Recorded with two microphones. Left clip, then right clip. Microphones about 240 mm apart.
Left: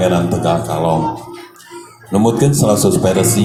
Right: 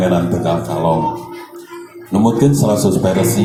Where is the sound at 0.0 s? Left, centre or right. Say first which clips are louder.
Left 1 dB; left.